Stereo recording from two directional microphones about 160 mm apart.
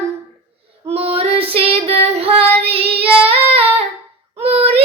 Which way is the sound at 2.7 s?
35° right (ahead or behind).